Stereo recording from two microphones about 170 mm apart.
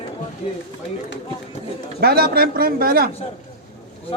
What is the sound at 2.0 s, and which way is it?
A man's voice, 65° right (ahead or behind).